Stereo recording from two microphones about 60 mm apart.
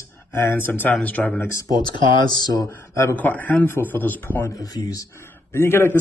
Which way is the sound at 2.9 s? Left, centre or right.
Left.